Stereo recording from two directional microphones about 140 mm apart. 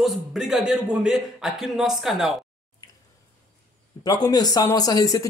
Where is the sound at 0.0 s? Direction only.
Centre (ahead or behind).